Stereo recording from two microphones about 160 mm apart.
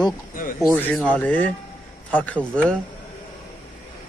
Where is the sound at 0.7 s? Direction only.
10° left (ahead or behind).